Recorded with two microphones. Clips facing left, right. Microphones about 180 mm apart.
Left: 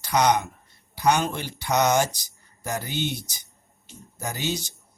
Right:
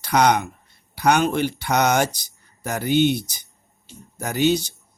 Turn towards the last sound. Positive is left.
turn(degrees=-65)  # may be behind; listen again after turning